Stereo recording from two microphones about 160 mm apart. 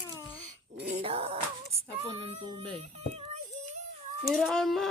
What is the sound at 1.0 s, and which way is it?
Music, 35° right (ahead or behind).